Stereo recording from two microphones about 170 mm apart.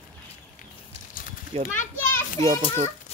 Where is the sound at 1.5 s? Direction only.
35° right (ahead or behind).